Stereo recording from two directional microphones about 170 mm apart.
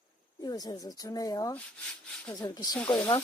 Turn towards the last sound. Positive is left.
turn(degrees=5)  # may be behind; listen again after turning